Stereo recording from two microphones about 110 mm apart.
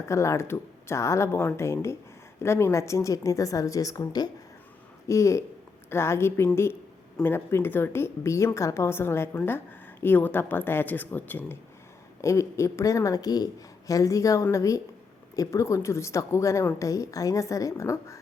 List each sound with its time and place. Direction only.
0.1 s speech: 25° left (ahead or behind)